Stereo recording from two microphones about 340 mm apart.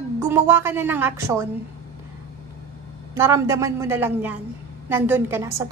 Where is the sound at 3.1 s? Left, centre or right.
Centre.